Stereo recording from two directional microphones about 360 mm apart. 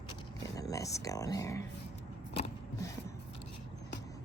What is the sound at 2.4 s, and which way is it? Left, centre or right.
Vehicle, centre.